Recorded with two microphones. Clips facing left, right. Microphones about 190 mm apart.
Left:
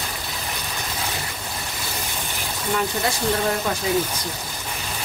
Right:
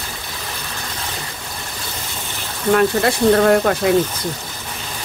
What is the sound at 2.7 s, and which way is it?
Speech, 65° right (ahead or behind).